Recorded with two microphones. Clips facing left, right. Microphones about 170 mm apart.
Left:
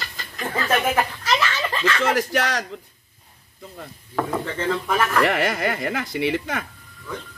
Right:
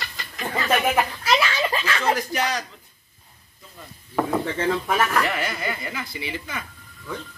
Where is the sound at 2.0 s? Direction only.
90° left.